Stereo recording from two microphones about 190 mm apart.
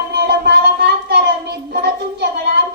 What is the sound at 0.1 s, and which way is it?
Child singing, 60° right (ahead or behind).